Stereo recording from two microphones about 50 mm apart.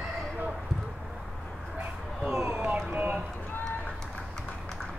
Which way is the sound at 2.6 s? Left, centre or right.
Right.